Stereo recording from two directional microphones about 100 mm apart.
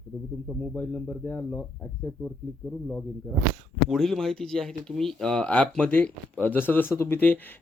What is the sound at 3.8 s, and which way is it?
Speech, centre (ahead or behind).